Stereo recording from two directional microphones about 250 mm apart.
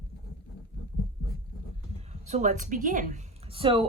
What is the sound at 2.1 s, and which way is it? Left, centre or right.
A woman's voice, right.